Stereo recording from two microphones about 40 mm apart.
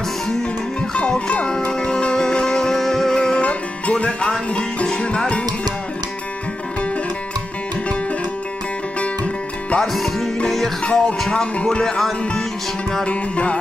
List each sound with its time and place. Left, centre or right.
0.7 s music: left; by 3.2 s centre
3.2 s music: left
9.0 s music: left
9.9 s music: centre
10.8 s music: left
13.0 s music: left